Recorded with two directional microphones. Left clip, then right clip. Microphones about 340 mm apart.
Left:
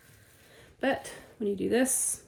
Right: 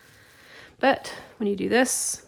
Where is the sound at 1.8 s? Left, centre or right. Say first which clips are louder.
Right 6 dB; centre.